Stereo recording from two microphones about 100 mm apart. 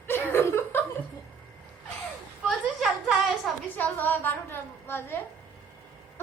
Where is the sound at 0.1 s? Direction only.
20° left (ahead or behind).